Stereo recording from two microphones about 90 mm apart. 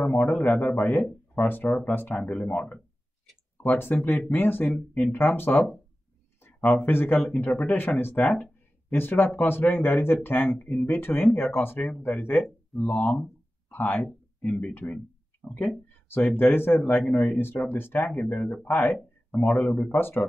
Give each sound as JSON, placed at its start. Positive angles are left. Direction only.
{"t": 0.0, "sound": "speech", "side_deg": 15}
{"t": 6.7, "sound": "speech", "side_deg": 25}
{"t": 12.4, "sound": "speech", "side_deg": 0}
{"t": 13.2, "sound": "a sound", "side_deg": 20}
{"t": 14.0, "sound": "speech", "side_deg": 10}
{"t": 20.0, "sound": "speech", "side_deg": 25}